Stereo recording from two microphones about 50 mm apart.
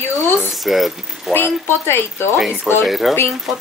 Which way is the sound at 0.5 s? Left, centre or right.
Centre.